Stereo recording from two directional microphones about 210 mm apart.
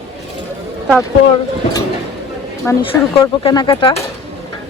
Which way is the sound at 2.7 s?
10° left (ahead or behind).